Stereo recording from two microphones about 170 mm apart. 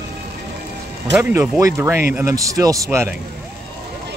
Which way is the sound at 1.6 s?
15° right (ahead or behind).